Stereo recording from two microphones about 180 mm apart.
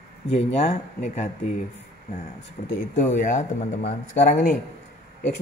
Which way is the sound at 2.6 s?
45° left (ahead or behind).